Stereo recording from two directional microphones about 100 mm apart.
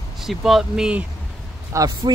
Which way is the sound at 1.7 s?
45° right (ahead or behind).